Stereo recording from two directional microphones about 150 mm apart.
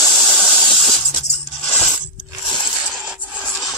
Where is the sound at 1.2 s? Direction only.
45° left (ahead or behind).